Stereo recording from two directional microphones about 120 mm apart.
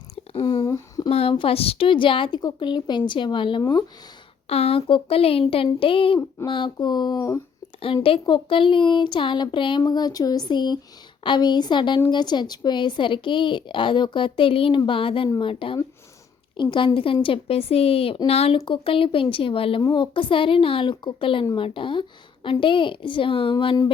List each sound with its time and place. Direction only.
0.3 s a sound: 45° left (ahead or behind)
0.6 s a sound: 30° left (ahead or behind)
1.1 s speech: 50° left (ahead or behind)
4.4 s speech: 55° left (ahead or behind); by 7.3 s 35° left (ahead or behind)
8.0 s speech: 50° left (ahead or behind)
19.8 s speech: 40° left (ahead or behind)